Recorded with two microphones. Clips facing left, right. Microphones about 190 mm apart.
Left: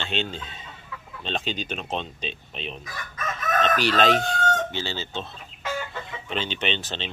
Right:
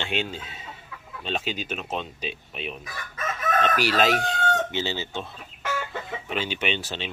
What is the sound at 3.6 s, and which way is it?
Chicken, 10° right (ahead or behind).